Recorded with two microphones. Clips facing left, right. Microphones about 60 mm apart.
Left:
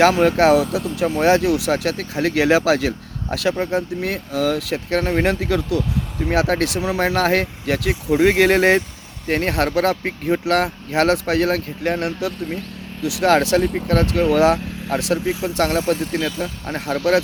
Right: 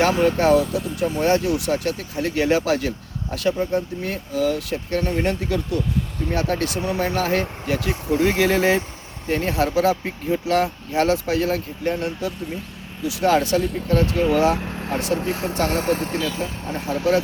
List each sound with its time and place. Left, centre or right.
0.0 s speech: left
13.0 s speech: left
13.9 s speech: left
14.9 s speech: left
15.3 s speech: right
15.5 s speech: left
15.8 s speech: right
16.6 s speech: left